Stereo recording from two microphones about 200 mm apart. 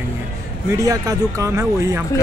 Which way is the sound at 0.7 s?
15° right (ahead or behind).